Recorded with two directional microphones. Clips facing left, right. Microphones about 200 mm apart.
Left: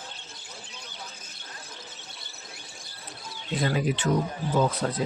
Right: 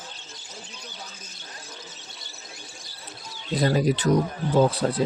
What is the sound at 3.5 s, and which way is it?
Speech, 40° right (ahead or behind).